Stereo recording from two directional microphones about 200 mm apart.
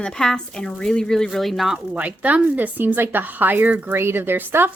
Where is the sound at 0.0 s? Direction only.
5° left (ahead or behind).